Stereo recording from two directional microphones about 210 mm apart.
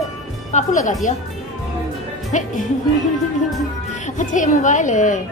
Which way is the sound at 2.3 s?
35° left (ahead or behind).